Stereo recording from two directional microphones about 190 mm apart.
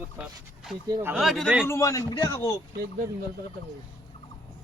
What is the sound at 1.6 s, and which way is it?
Speech, 15° left (ahead or behind).